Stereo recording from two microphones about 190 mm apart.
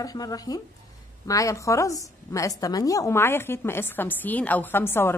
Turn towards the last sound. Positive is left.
turn(degrees=10)  # may be behind; listen again after turning